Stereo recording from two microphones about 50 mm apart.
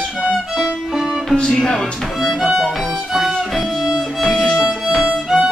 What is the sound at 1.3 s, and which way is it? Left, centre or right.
Speech, centre.